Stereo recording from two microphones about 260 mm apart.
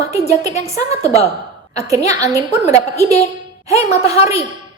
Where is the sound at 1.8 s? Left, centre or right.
Centre.